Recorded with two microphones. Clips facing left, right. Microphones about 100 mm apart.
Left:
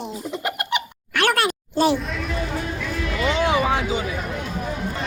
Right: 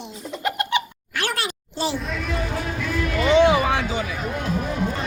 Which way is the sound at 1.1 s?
60° left (ahead or behind).